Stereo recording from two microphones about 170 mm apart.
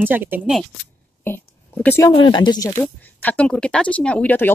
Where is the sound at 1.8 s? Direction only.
15° left (ahead or behind).